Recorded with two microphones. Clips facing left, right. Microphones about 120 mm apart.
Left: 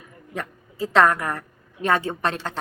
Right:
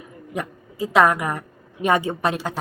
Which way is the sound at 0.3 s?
10° right (ahead or behind).